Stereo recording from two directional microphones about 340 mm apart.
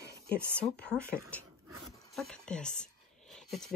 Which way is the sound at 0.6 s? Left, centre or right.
Centre.